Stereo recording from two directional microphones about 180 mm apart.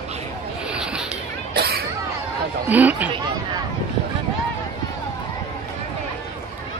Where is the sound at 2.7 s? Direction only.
10° right (ahead or behind).